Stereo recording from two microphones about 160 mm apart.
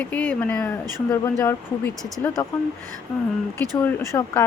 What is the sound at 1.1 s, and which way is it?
Speech, 20° left (ahead or behind).